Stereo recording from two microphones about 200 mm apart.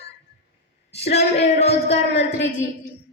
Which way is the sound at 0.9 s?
30° left (ahead or behind).